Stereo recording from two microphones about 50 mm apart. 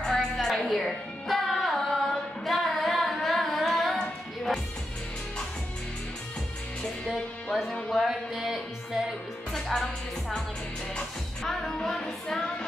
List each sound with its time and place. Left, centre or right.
0.1 s a sound: centre
0.7 s music: centre
7.7 s a sound: centre
8.1 s music: centre
9.5 s music: centre
11.0 s music: centre